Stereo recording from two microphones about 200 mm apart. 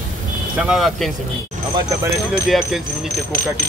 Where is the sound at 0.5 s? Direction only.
5° right (ahead or behind).